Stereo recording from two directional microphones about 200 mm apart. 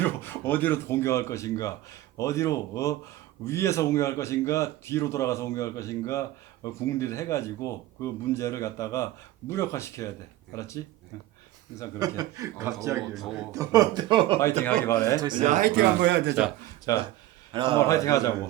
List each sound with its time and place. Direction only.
0.0 s speech: 10° left (ahead or behind)
11.9 s speech: 20° right (ahead or behind)
14.8 s speech: 15° left (ahead or behind)
15.2 s speech: 20° right (ahead or behind)
15.4 s a man's voice: 45° right (ahead or behind); by 16.3 s 60° right (ahead or behind)
16.3 s speech: 5° right (ahead or behind)
16.9 s speech: 15° left (ahead or behind)
17.5 s a man's voice: 25° right (ahead or behind)
17.7 s speech: 15° left (ahead or behind)